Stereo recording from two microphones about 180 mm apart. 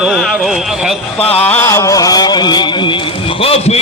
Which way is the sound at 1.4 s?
10° left (ahead or behind).